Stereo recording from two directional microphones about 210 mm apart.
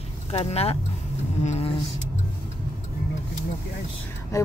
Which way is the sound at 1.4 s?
30° left (ahead or behind).